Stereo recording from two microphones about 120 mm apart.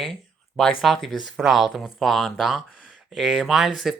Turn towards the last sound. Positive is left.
turn(degrees=-5)  # may be behind; listen again after turning